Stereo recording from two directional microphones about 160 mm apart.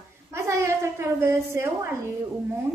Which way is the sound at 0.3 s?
15° right (ahead or behind).